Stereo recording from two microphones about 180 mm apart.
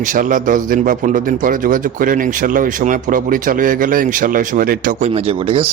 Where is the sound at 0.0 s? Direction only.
45° right (ahead or behind).